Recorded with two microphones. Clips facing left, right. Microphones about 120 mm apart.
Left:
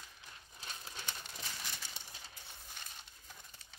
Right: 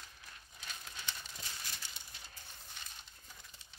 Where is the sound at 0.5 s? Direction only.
35° left (ahead or behind).